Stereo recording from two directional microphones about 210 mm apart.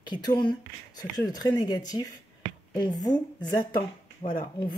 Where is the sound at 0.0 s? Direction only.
20° left (ahead or behind).